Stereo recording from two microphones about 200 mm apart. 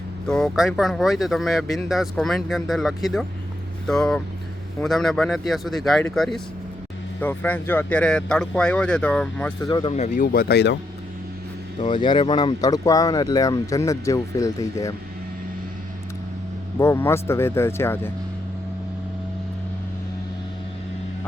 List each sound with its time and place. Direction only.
0.3 s speech: centre (ahead or behind)
9.6 s speech: 20° left (ahead or behind)
9.9 s speech: 35° left (ahead or behind); by 10.8 s 55° left (ahead or behind)
11.8 s speech: 25° left (ahead or behind)
12.6 s speech: 15° left (ahead or behind)
16.7 s speech: 15° left (ahead or behind)